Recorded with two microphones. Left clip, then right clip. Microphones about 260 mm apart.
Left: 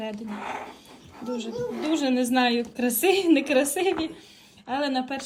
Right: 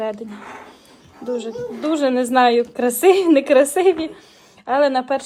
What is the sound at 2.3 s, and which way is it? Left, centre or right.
A woman's voice, centre.